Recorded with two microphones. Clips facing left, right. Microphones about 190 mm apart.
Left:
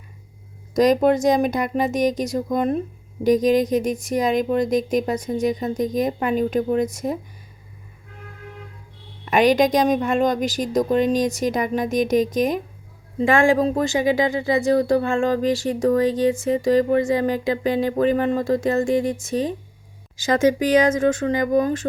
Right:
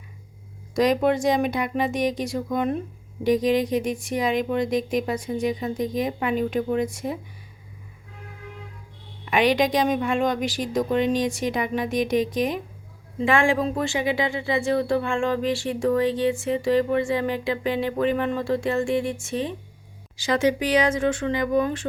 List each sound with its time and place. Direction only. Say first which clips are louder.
0.7 s speech: left 4 dB; 40° left (ahead or behind)
9.2 s speech: left 4 dB; 45° left (ahead or behind)